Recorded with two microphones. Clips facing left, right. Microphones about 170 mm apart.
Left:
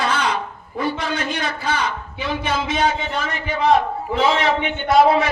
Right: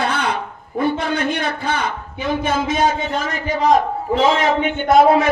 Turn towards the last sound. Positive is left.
turn(degrees=-50)  # may be behind; listen again after turning